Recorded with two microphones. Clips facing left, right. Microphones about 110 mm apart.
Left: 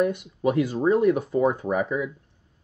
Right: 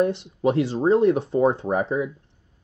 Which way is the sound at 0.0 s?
25° right (ahead or behind).